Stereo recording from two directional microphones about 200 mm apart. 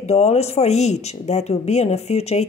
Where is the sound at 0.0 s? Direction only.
35° left (ahead or behind).